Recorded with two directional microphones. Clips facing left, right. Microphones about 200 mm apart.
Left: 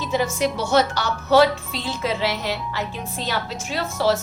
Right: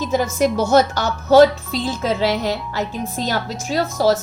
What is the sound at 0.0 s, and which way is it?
A woman's voice, 45° right (ahead or behind).